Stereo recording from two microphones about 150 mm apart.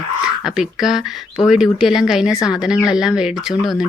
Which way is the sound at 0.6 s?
5° right (ahead or behind).